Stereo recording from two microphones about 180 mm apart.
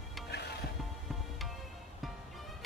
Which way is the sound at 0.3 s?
65° left (ahead or behind).